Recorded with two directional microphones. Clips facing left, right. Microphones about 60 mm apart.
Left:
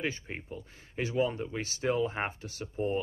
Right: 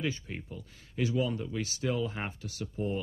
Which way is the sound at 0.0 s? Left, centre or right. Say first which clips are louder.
Even; left.